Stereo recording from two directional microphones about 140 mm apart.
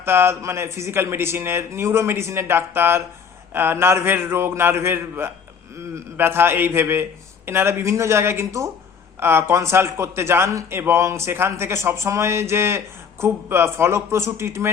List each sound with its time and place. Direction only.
0.0 s a man's voice: 15° right (ahead or behind)